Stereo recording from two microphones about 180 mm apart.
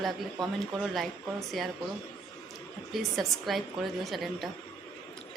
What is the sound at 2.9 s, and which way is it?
A woman's voice, centre (ahead or behind).